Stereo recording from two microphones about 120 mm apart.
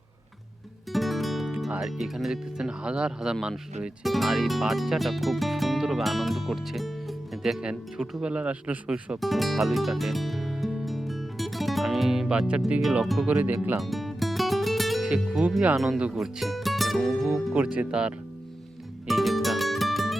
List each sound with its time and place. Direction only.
0.9 s music: centre (ahead or behind)
1.7 s speech: centre (ahead or behind)
9.2 s music: centre (ahead or behind)
13.2 s speech: 15° right (ahead or behind)
13.7 s music: centre (ahead or behind)
15.1 s speech: 10° right (ahead or behind)
17.5 s speech: 10° right (ahead or behind)
19.0 s music: centre (ahead or behind)